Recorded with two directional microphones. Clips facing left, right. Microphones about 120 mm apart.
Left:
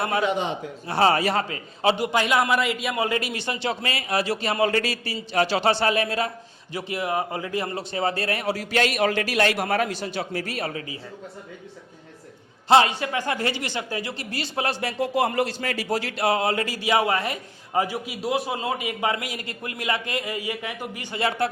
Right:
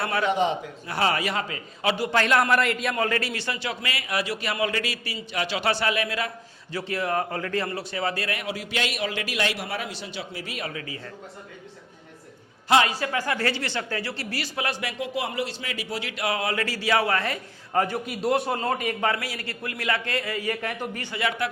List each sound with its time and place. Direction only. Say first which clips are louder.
0.0 s speech: left 2 dB; 20° left (ahead or behind)
0.9 s a man's voice: left 5 dB; 30° left (ahead or behind)
2.0 s a man's voice: even; 10° left (ahead or behind)
2.9 s speech: left 1 dB; 15° left (ahead or behind)
6.7 s a man's voice: even; 15° left (ahead or behind)
7.7 s a man's voice: left 3 dB; 25° left (ahead or behind)
12.6 s a man's voice: left 3 dB; 25° left (ahead or behind)
21.2 s a man's voice: left 3 dB; 30° left (ahead or behind)